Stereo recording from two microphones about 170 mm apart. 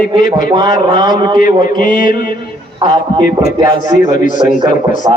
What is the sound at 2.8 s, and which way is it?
A man's voice, 30° right (ahead or behind).